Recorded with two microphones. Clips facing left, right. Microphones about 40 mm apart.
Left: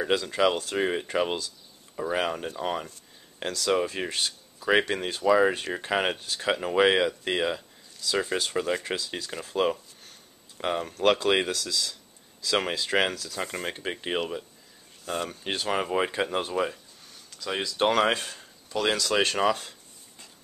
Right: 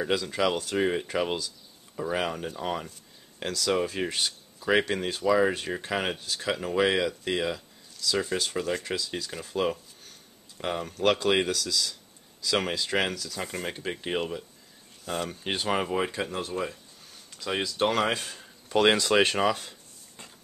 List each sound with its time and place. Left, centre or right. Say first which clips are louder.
0.0 s speech: left 2 dB; centre
16.1 s speech: left 4 dB; left
16.3 s speech: left 5 dB; left
17.5 s speech: right 1 dB; centre
17.7 s speech: left 4 dB; centre
18.7 s speech: right 4 dB; right
19.1 s speech: right 1 dB; centre